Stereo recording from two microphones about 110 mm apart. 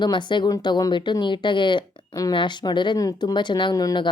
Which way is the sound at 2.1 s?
30° left (ahead or behind).